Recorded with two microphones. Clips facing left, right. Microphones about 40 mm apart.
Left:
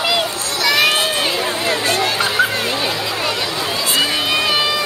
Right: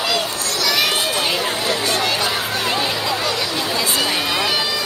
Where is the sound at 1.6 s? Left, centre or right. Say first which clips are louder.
Left 4 dB; left.